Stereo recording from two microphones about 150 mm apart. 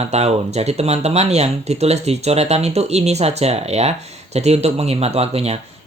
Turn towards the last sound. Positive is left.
turn(degrees=-45)  # may be behind; listen again after turning